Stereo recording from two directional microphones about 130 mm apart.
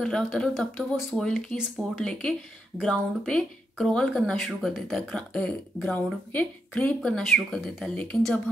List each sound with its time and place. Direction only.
0.0 s speech: 5° left (ahead or behind)